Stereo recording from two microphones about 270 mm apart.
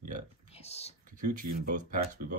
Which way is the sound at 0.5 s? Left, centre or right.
Left.